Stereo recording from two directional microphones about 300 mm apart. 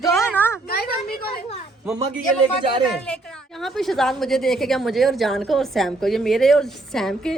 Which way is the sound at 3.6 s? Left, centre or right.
Centre.